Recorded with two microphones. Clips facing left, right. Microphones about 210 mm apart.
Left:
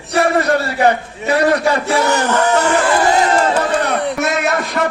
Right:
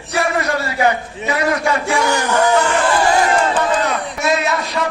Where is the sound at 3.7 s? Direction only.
60° left (ahead or behind).